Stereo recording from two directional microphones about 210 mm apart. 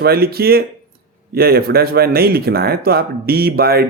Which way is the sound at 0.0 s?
45° right (ahead or behind).